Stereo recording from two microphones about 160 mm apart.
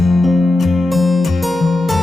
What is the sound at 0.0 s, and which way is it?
Music, centre (ahead or behind).